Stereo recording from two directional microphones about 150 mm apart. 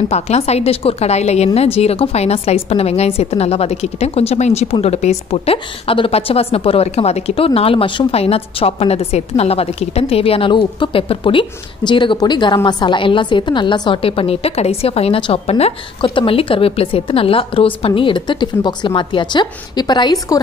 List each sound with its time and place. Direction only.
0.1 s a woman's voice: 45° left (ahead or behind); by 20.3 s 25° left (ahead or behind)